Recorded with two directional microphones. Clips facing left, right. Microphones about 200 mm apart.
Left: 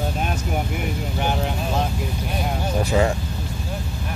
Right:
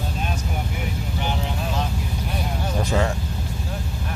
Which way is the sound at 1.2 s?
50° left (ahead or behind).